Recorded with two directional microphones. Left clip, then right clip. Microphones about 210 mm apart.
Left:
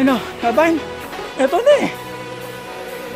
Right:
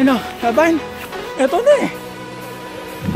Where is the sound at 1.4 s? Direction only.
15° left (ahead or behind).